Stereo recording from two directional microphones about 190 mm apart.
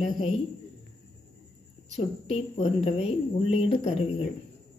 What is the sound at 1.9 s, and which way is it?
Speech, 35° left (ahead or behind).